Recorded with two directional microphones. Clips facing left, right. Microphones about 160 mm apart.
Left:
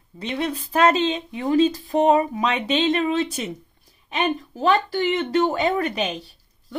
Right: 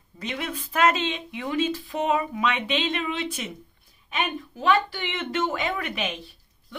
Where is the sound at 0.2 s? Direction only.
30° left (ahead or behind).